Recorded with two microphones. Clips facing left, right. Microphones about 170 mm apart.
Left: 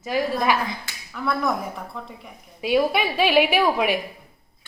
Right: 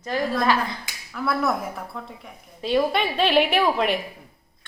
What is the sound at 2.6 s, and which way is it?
A woman's voice, 10° left (ahead or behind).